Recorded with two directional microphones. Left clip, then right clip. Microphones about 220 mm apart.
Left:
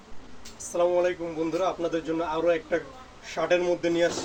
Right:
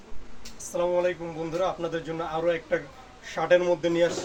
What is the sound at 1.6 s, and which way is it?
Speech, 15° right (ahead or behind).